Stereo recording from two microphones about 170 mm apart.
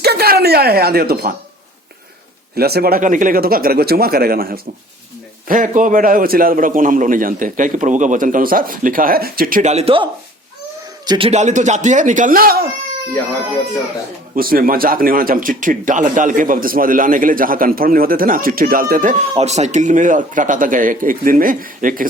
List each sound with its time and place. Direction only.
0.0 s speech: 65° right (ahead or behind)
2.6 s a man's voice: 65° right (ahead or behind); by 11.3 s 25° right (ahead or behind)
11.3 s a man's voice: 45° right (ahead or behind); by 12.6 s 60° right (ahead or behind)
14.3 s speech: 60° right (ahead or behind)
19.3 s a man's voice: 40° right (ahead or behind)